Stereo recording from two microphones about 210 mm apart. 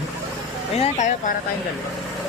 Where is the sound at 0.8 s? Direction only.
35° left (ahead or behind).